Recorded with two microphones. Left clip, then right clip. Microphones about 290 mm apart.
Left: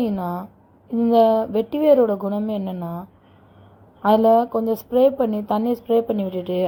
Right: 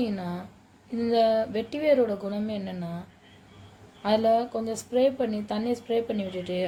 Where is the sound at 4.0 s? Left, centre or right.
Left.